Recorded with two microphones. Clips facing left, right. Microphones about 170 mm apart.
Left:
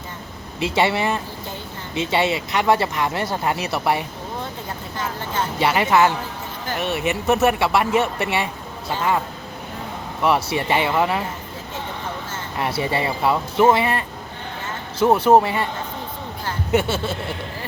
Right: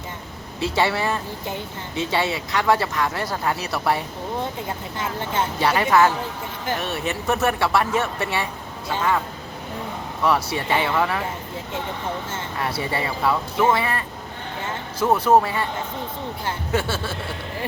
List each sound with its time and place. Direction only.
0.6 s speech: 20° left (ahead or behind)
4.9 s speech: 25° right (ahead or behind)
5.5 s speech: 25° left (ahead or behind)
7.0 s speech: 10° left (ahead or behind)
7.6 s speech: 20° left (ahead or behind)
10.2 s speech: 25° left (ahead or behind)
12.5 s speech: 25° left (ahead or behind)
16.7 s speech: 20° left (ahead or behind)